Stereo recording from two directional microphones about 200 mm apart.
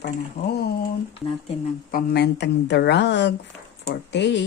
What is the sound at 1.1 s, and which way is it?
Speech, 25° left (ahead or behind).